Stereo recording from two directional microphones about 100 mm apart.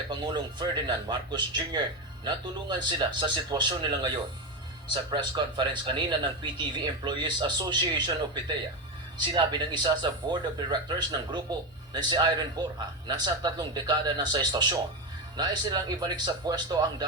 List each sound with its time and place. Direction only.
0.1 s speech: 50° right (ahead or behind)